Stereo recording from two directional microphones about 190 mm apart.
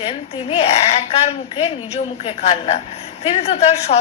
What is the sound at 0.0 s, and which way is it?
A woman's voice, 30° left (ahead or behind).